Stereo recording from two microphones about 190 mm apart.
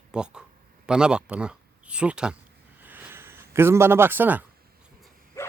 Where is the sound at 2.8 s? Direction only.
10° right (ahead or behind).